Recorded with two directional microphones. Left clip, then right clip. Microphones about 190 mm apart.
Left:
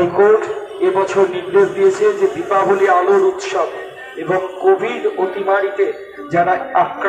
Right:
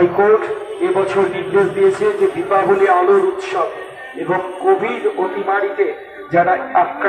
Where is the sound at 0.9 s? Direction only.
50° left (ahead or behind).